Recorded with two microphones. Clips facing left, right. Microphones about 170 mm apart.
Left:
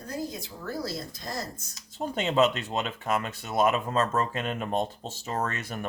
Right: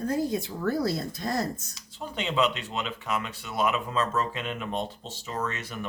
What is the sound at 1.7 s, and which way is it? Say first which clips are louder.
Speech: left 4 dB; 45° left (ahead or behind).